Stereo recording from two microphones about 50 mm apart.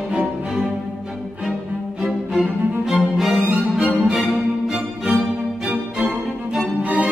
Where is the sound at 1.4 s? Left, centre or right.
Centre.